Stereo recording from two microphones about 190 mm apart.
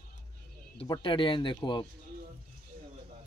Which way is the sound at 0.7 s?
25° left (ahead or behind).